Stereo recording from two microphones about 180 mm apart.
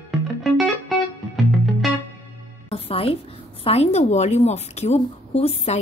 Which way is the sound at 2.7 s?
30° left (ahead or behind).